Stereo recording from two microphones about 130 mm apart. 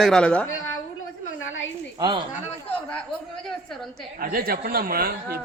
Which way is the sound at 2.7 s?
10° left (ahead or behind).